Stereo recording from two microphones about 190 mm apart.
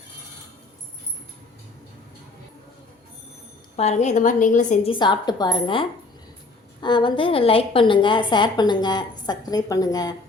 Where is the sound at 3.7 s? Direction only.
35° left (ahead or behind).